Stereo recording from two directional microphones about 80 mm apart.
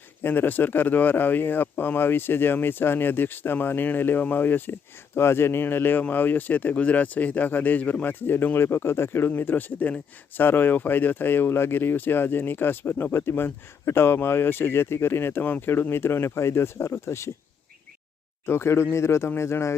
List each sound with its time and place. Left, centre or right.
0.2 s speech: left
18.4 s speech: left